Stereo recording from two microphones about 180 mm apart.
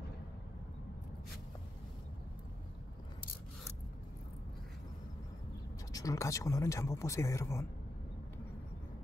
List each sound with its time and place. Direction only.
5.9 s speech: 20° left (ahead or behind)